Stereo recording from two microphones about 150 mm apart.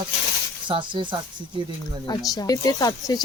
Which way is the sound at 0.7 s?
35° right (ahead or behind).